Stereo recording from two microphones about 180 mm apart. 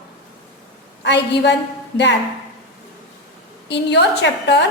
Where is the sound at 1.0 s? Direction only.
75° left (ahead or behind).